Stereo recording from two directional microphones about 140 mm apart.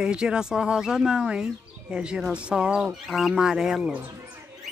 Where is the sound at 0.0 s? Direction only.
5° right (ahead or behind).